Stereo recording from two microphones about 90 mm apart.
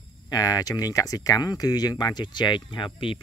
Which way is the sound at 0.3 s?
45° left (ahead or behind).